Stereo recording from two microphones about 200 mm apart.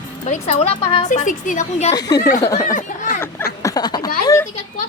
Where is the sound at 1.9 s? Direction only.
20° left (ahead or behind).